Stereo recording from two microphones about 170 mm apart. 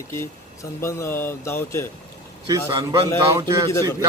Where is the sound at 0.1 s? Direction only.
15° left (ahead or behind).